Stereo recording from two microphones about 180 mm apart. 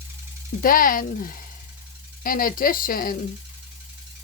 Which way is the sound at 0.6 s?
50° left (ahead or behind).